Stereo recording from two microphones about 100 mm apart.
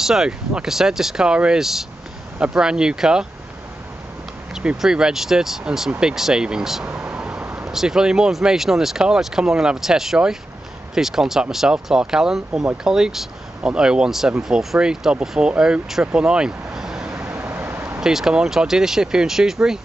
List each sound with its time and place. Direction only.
0.0 s speech: 5° right (ahead or behind)
4.6 s speech: 5° right (ahead or behind)
7.1 s vehicle: 10° right (ahead or behind)
7.7 s speech: 5° right (ahead or behind)
17.3 s vehicle: 20° right (ahead or behind)
18.0 s speech: 5° right (ahead or behind)